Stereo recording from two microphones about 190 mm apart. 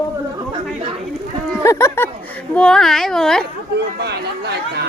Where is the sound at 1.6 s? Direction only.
15° left (ahead or behind).